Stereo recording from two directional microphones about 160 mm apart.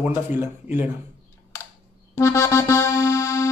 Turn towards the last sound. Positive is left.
turn(degrees=15)  # may be behind; listen again after turning